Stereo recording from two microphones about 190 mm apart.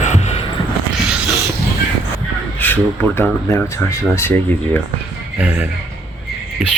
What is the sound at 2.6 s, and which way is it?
Speech, 10° left (ahead or behind).